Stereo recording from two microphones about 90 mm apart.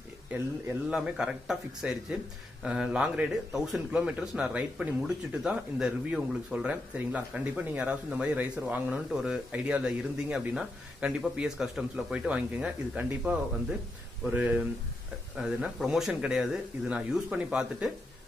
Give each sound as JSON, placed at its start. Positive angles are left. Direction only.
{"t": 0.8, "sound": "a man's voice", "side_deg": -10}
{"t": 15.3, "sound": "a man's voice", "side_deg": -5}